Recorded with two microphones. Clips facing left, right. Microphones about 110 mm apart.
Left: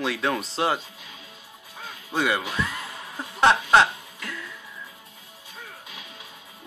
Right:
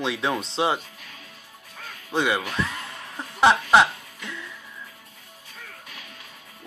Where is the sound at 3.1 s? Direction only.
Centre (ahead or behind).